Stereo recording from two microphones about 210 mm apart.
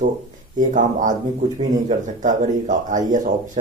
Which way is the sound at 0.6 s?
40° right (ahead or behind).